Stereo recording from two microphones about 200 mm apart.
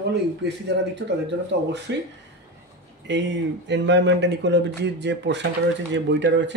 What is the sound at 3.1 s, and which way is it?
Speech, 60° right (ahead or behind).